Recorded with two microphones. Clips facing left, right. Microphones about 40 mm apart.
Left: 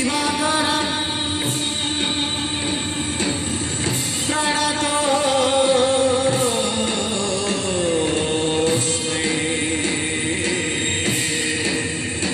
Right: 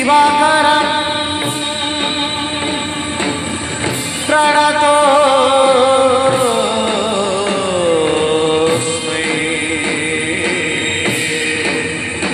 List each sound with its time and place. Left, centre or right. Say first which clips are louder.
0.0 s music: right 11 dB; right
4.3 s music: right 11 dB; right
7.8 s a sound: right 8 dB; right